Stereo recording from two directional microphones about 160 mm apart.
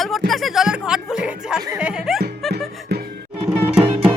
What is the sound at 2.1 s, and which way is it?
Music, centre (ahead or behind).